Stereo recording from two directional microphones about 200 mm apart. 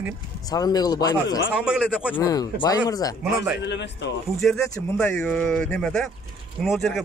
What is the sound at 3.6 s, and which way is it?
Speech, 60° left (ahead or behind).